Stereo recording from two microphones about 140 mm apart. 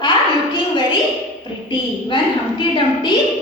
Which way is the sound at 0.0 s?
35° left (ahead or behind).